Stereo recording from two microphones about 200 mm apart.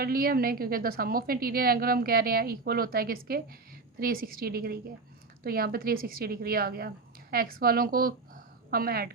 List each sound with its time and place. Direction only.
0.0 s a woman's voice: 50° right (ahead or behind)